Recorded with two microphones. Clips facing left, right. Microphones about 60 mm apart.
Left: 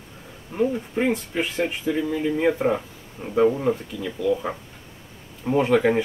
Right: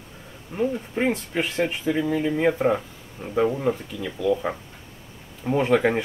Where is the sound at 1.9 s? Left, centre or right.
Right.